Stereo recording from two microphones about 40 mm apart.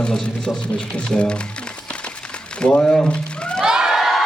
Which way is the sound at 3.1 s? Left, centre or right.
Left.